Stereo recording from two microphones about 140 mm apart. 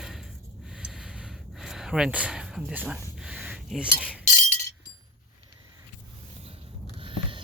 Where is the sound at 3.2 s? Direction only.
5° right (ahead or behind).